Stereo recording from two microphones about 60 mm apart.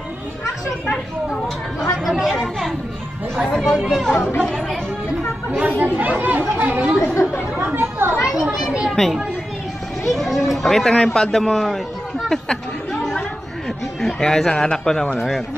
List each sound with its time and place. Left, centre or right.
1.8 s speech: centre
5.5 s speech: right
7.2 s speech: left
7.7 s speech: right
8.2 s children playing: centre
8.9 s speech: centre
14.0 s speech: centre